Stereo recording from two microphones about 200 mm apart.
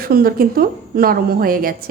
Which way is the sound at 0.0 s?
50° right (ahead or behind).